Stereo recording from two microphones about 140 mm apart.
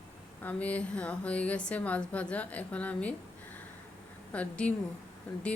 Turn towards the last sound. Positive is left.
turn(degrees=10)  # may be behind; listen again after turning